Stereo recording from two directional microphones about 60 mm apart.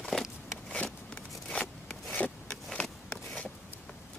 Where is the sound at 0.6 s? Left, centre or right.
Centre.